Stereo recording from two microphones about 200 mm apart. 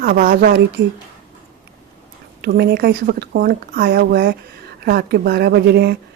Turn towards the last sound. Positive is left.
turn(degrees=-55)  # may be behind; listen again after turning